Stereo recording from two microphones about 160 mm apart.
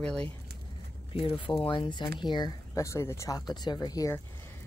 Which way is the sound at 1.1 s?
35° left (ahead or behind).